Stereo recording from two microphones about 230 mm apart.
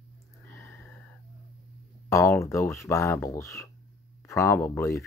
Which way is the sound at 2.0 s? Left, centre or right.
Centre.